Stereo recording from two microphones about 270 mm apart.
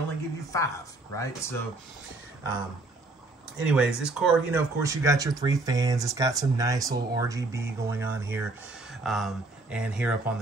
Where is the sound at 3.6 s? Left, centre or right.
Centre.